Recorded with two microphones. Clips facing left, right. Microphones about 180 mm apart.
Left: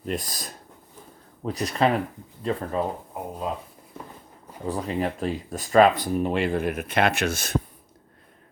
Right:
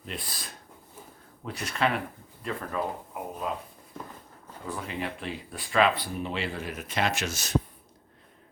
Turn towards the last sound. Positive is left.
turn(degrees=55)  # may be behind; listen again after turning